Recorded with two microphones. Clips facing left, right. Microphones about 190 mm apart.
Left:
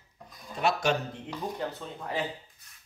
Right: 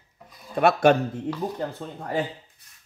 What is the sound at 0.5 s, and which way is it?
Speech, 60° right (ahead or behind).